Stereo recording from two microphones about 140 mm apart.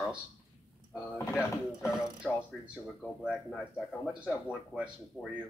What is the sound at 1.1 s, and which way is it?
Speech, 15° left (ahead or behind).